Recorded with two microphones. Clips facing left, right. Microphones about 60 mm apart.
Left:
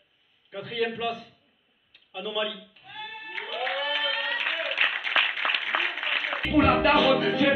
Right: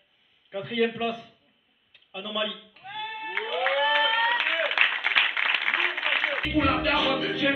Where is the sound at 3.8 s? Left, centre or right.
Right.